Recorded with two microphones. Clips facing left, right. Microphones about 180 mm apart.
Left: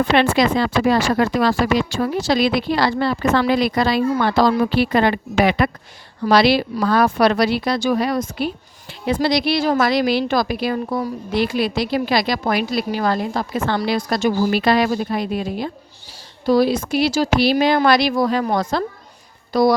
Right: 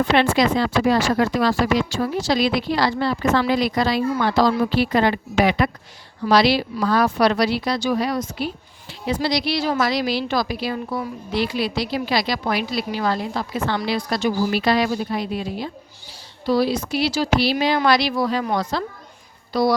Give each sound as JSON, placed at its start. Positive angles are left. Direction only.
{"t": 0.1, "sound": "a woman's voice", "side_deg": 65}